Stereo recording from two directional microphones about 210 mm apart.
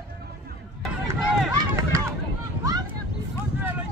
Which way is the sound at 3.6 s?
10° right (ahead or behind).